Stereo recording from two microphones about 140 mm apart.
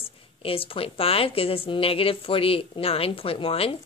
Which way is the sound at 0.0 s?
40° left (ahead or behind).